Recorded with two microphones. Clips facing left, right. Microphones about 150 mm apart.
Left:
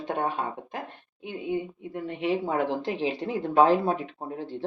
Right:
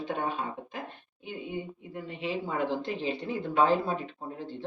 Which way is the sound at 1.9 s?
65° left (ahead or behind).